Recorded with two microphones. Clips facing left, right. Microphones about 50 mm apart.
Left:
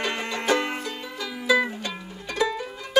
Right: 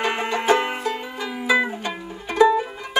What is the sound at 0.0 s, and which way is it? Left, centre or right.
Banjo, right.